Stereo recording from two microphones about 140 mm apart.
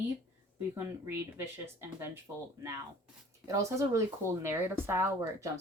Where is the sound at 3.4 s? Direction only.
20° right (ahead or behind).